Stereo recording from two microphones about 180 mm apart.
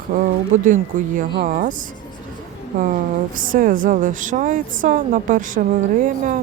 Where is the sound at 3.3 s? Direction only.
50° right (ahead or behind).